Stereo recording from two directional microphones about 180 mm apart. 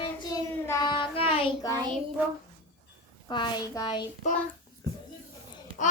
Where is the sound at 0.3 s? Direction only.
20° left (ahead or behind).